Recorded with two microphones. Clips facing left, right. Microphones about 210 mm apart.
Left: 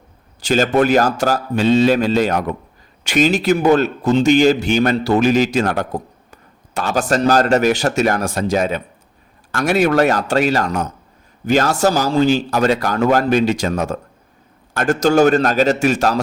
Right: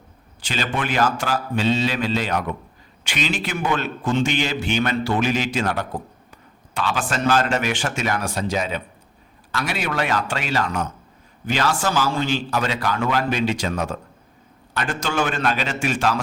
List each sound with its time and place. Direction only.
0.4 s a man's voice: 45° left (ahead or behind)